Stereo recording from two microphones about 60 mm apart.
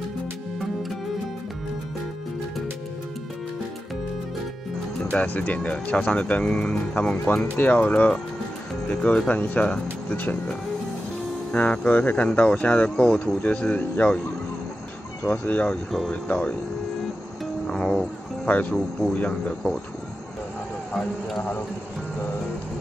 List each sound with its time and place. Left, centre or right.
5.1 s speech: left
7.0 s speech: left
11.5 s speech: left
15.2 s speech: left
15.7 s speech: centre
16.1 s speech: centre
17.6 s music: centre
18.7 s speech: centre
19.1 s speech: left
21.4 s speech: left